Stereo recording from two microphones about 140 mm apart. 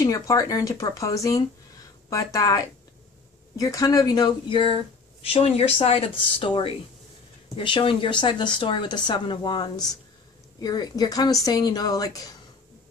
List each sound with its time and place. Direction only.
0.0 s a woman's voice: 25° left (ahead or behind)